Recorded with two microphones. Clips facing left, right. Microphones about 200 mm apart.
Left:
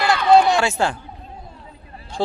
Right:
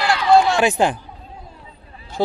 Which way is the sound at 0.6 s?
15° right (ahead or behind).